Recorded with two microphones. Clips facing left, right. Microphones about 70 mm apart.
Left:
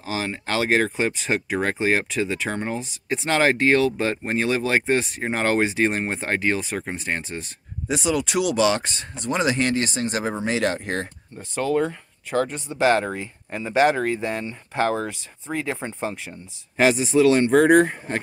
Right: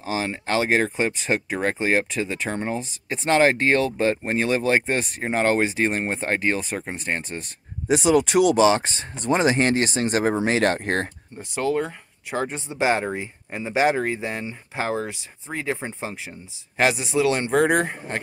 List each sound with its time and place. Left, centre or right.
0.0 s speech: right
0.3 s speech: centre
3.3 s speech: centre
6.5 s speech: centre
7.9 s speech: right
11.3 s speech: centre